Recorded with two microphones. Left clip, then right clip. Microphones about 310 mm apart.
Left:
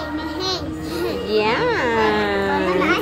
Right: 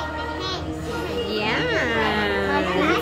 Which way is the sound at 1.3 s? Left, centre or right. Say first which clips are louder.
Left 5 dB; centre.